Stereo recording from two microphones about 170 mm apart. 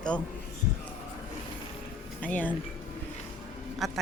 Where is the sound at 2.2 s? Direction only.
10° left (ahead or behind).